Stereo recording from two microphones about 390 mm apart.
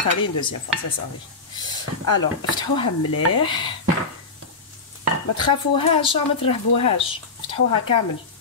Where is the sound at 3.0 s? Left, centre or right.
Left.